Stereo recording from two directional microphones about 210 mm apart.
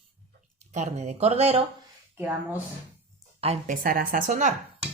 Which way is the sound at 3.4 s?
35° right (ahead or behind).